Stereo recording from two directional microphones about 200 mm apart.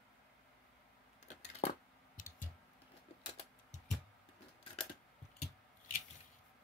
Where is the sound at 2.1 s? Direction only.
40° left (ahead or behind).